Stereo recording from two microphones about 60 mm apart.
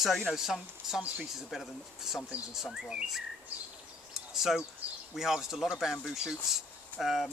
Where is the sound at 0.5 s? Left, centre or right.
Centre.